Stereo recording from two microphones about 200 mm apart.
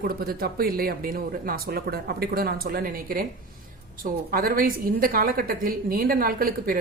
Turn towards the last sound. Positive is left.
turn(degrees=-45)  # may be behind; listen again after turning